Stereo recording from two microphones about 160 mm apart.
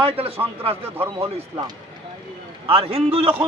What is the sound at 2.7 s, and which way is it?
Speech, 40° right (ahead or behind).